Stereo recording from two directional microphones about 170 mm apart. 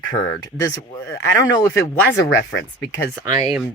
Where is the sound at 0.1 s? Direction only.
20° left (ahead or behind).